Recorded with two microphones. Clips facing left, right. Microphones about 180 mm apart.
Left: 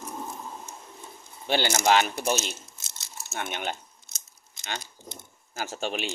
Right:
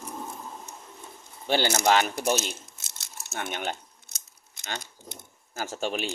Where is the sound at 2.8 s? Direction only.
55° right (ahead or behind).